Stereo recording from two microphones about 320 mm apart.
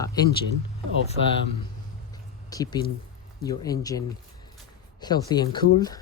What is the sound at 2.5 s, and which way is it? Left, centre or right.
Speech, centre.